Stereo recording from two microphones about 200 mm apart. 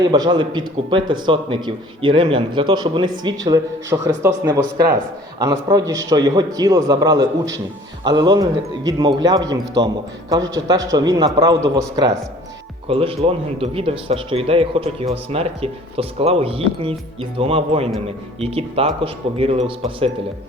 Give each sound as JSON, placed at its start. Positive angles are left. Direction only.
{"t": 0.0, "sound": "speech", "side_deg": -20}